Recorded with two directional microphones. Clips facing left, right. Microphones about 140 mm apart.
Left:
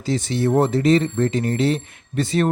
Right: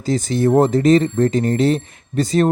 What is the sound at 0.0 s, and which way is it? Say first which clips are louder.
Speech: right 4 dB; 45° right (ahead or behind).